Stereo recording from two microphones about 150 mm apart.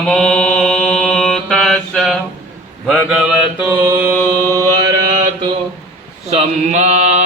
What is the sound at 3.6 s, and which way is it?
Mantra, 15° right (ahead or behind).